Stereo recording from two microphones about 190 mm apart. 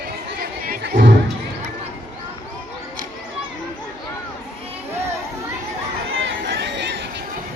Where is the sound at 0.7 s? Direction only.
50° right (ahead or behind).